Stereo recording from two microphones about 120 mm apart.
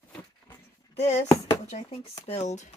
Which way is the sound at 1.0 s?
70° left (ahead or behind).